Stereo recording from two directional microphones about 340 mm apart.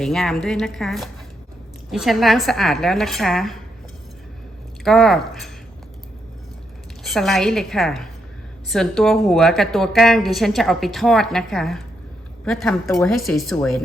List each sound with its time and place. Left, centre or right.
0.0 s a woman's voice: centre
4.8 s a woman's voice: centre
7.0 s a woman's voice: centre